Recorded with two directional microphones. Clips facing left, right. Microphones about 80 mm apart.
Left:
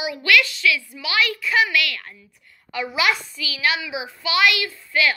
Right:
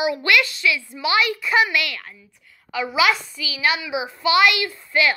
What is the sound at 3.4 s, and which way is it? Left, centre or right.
A woman's voice, centre.